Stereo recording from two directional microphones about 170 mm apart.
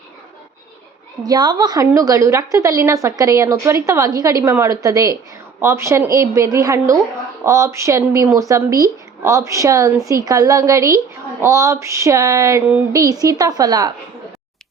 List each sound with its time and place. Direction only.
1.2 s a woman's voice: 25° right (ahead or behind)